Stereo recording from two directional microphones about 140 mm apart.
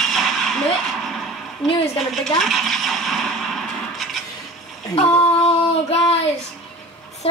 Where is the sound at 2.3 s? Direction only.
Centre (ahead or behind).